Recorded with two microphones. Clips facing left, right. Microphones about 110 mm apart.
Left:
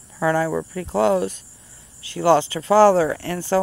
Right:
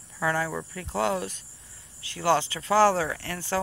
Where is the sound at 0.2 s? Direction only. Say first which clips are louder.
Left 8 dB; 40° left (ahead or behind).